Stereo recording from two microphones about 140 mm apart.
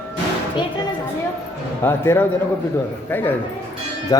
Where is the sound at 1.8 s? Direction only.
15° left (ahead or behind).